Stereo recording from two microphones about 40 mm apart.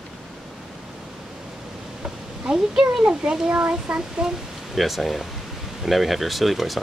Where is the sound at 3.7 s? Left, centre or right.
Right.